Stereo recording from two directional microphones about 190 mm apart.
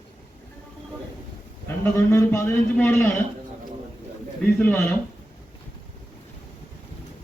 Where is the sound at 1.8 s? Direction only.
15° left (ahead or behind).